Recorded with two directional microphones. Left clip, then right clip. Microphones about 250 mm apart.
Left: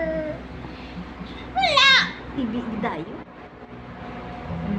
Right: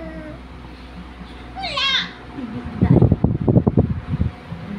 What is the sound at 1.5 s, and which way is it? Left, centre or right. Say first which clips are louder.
Children playing: left 5 dB; centre.